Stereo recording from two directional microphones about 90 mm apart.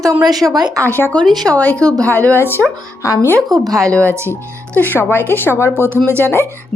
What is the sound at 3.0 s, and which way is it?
Speech, 35° left (ahead or behind).